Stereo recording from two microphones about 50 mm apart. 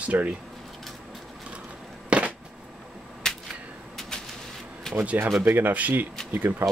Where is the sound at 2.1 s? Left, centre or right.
Right.